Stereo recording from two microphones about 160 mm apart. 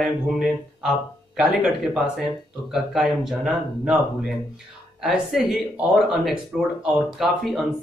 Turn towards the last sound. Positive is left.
turn(degrees=0)  # may be behind; listen again after turning